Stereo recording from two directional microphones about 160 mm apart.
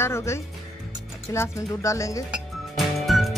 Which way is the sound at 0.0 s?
15° left (ahead or behind).